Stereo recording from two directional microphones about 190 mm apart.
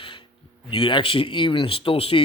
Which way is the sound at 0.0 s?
25° left (ahead or behind).